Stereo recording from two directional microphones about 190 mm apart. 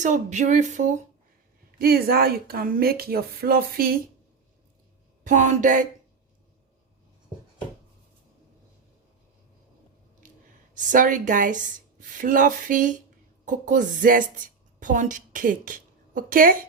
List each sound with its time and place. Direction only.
0.0 s speech: 40° right (ahead or behind)
1.8 s a woman's voice: 55° right (ahead or behind)
5.2 s speech: 40° right (ahead or behind)
10.8 s a woman's voice: 45° right (ahead or behind)